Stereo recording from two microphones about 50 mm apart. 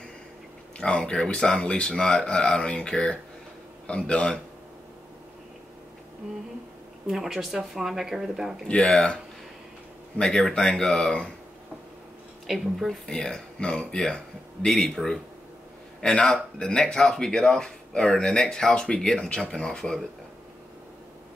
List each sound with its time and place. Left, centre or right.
0.7 s speech: left
7.1 s speech: centre
8.6 s speech: centre
12.4 s speech: centre
13.0 s speech: centre